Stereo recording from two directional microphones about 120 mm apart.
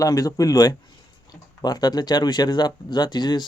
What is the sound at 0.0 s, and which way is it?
A man's voice, 30° left (ahead or behind).